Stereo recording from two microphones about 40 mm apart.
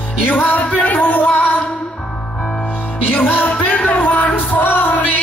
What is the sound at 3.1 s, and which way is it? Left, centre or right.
Music, left.